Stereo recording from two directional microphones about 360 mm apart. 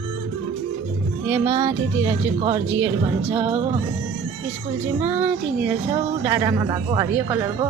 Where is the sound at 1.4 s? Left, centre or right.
Centre.